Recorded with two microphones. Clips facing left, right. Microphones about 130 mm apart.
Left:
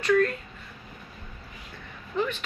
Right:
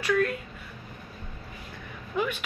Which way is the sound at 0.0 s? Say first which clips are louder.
Left 3 dB; 5° right (ahead or behind).